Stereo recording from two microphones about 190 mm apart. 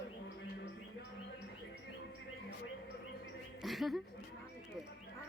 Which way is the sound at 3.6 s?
Centre (ahead or behind).